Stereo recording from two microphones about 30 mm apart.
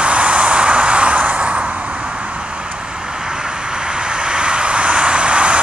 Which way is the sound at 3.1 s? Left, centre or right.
Right.